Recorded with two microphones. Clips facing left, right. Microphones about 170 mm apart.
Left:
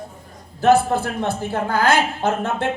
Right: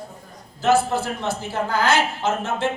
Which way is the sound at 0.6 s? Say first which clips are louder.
Left 3 dB; 55° left (ahead or behind).